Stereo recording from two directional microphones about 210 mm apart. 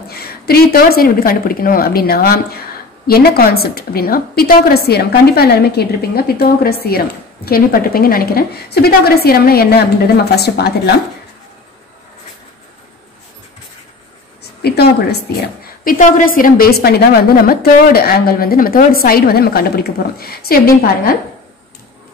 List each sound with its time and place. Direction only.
0.1 s a woman's voice: 45° left (ahead or behind)
14.6 s a woman's voice: 50° left (ahead or behind)